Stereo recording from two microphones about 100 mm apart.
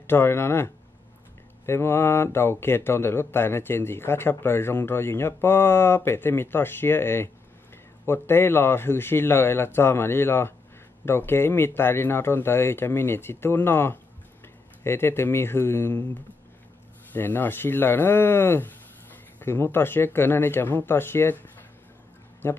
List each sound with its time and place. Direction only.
0.0 s speech: 25° left (ahead or behind)
1.7 s speech: 25° left (ahead or behind)
17.1 s speech: 20° left (ahead or behind)